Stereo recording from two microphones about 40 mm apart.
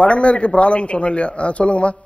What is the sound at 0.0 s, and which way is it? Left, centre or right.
A man's voice, left.